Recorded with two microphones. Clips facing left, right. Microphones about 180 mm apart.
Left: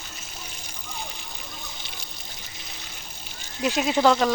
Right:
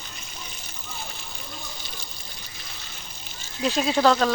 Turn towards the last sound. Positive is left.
turn(degrees=15)  # may be behind; listen again after turning